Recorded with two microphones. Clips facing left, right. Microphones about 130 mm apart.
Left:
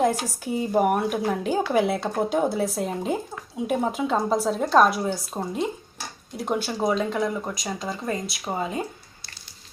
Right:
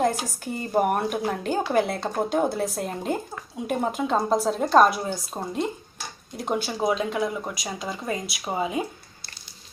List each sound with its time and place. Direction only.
0.0 s speech: 5° left (ahead or behind); by 8.9 s 10° right (ahead or behind)